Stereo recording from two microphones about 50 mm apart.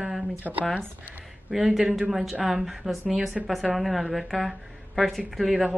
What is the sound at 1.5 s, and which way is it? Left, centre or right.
A woman's voice, centre.